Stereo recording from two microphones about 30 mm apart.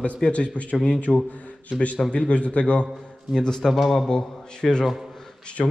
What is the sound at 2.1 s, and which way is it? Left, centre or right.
Speech, left.